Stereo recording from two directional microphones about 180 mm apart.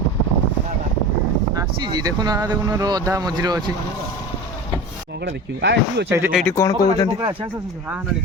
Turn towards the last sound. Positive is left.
turn(degrees=20)  # may be behind; listen again after turning